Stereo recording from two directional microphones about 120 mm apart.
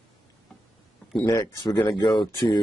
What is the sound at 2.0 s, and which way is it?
Speech, 40° left (ahead or behind).